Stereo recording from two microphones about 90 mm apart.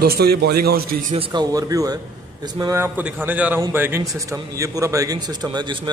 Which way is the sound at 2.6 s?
55° right (ahead or behind).